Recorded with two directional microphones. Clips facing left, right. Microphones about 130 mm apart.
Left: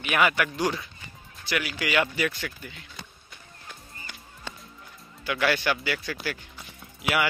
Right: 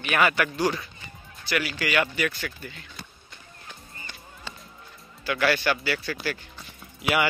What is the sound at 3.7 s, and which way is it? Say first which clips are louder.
Music: even; 10° left (ahead or behind).